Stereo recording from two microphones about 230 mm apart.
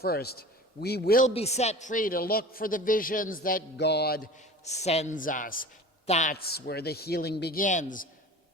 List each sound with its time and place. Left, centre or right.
0.0 s a man's voice: left
1.3 s a man's voice: left
4.6 s a man's voice: left
6.3 s a man's voice: left